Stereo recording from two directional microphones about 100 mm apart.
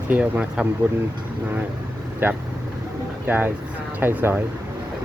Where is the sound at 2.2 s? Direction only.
20° right (ahead or behind).